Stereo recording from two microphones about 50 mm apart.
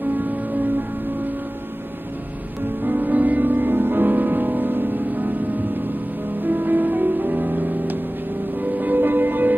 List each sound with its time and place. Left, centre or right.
0.1 s music: right
2.8 s music: right
6.4 s music: right